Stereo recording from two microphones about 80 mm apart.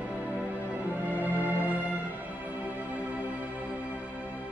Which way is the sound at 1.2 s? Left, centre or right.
Centre.